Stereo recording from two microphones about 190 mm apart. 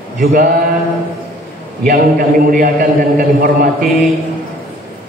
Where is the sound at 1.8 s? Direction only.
55° right (ahead or behind).